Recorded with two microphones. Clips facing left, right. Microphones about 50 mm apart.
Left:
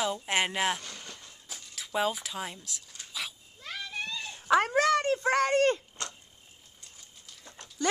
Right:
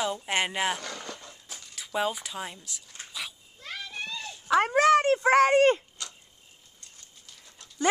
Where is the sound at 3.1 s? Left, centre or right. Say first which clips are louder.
Left 1 dB; centre.